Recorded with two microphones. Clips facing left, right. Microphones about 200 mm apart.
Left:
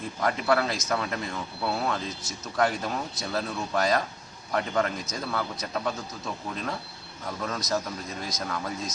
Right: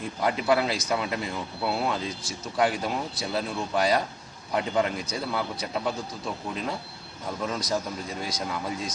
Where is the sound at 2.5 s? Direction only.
5° right (ahead or behind).